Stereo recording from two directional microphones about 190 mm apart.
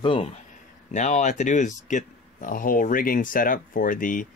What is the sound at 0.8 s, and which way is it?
Speech, 40° left (ahead or behind).